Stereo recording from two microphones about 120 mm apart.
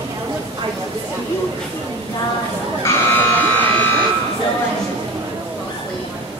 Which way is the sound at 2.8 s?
15° left (ahead or behind).